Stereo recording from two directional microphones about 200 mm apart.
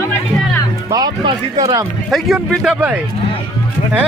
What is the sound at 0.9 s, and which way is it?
Speech, 20° right (ahead or behind).